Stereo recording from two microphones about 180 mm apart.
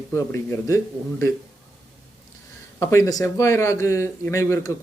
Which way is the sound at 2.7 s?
15° left (ahead or behind).